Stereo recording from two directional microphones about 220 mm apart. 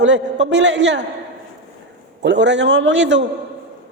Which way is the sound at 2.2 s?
55° right (ahead or behind).